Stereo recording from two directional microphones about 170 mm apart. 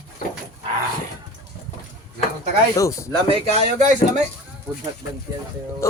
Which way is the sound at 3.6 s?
40° right (ahead or behind).